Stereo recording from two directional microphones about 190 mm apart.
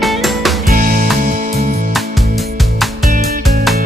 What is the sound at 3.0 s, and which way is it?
Music, 50° right (ahead or behind).